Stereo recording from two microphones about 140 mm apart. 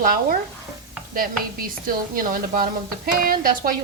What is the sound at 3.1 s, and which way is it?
Speech, 90° right.